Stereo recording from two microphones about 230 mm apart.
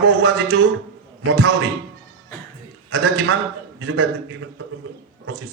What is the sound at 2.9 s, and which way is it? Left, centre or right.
Speech, right.